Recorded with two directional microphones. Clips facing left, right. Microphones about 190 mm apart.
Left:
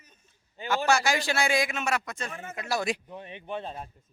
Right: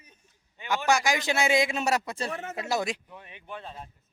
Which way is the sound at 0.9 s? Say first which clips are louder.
Right 1 dB; 15° right (ahead or behind).